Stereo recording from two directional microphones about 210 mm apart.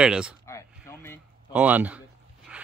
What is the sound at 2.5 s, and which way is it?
Dog, 5° right (ahead or behind).